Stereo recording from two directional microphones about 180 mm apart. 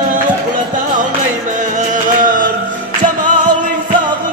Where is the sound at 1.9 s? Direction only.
45° right (ahead or behind).